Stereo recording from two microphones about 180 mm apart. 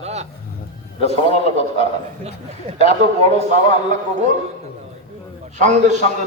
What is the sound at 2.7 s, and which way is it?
Speech, 40° right (ahead or behind).